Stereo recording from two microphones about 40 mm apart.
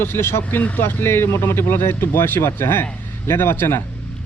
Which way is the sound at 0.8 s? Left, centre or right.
Left.